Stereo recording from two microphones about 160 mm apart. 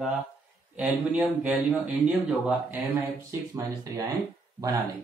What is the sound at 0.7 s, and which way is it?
Speech, 5° right (ahead or behind).